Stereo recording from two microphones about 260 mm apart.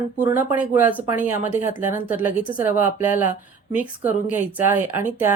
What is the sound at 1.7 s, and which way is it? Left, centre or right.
Speech, left.